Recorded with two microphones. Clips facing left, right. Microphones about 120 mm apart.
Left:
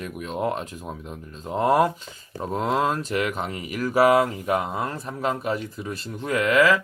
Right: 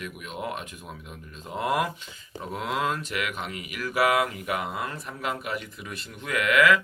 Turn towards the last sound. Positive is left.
turn(degrees=35)  # may be behind; listen again after turning